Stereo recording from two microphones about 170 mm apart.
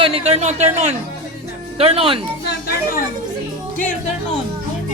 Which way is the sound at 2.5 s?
60° left (ahead or behind).